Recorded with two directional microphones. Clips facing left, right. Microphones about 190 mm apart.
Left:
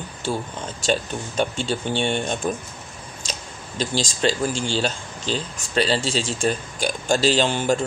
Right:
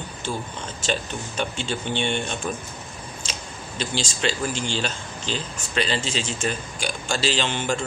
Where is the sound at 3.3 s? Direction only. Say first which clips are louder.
Left 1 dB; 40° left (ahead or behind).